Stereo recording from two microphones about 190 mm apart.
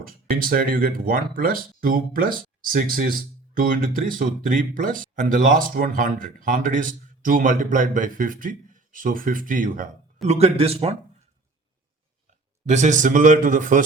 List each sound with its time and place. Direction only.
0.0 s speech: 50° right (ahead or behind)
10.2 s a man's voice: 35° right (ahead or behind)
12.6 s speech: 40° right (ahead or behind)